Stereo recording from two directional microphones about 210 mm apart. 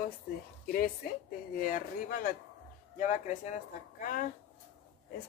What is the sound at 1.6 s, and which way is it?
Speech, 40° left (ahead or behind).